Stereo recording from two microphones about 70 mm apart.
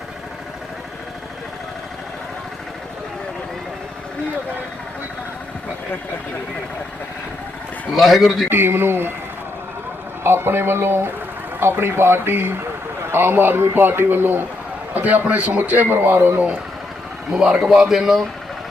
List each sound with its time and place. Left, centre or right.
7.9 s a man's voice: centre
8.4 s a man's voice: right
10.2 s a man's voice: right
17.3 s a man's voice: centre